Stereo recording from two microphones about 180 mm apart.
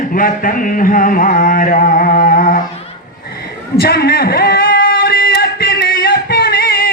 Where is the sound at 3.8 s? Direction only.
60° left (ahead or behind).